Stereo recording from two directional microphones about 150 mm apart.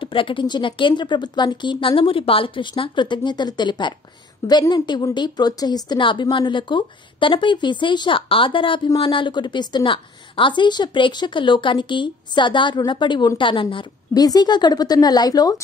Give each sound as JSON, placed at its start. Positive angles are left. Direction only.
{"t": 0.0, "sound": "a woman's voice", "side_deg": 35}